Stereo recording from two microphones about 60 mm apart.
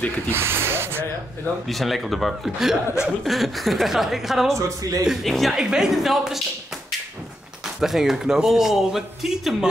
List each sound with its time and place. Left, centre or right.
0.3 s speech: right
1.7 s a woman's voice: centre
4.6 s speech: right
5.0 s a woman's voice: centre
7.8 s speech: centre